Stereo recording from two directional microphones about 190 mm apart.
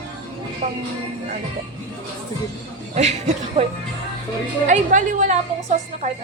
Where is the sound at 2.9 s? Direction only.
35° right (ahead or behind).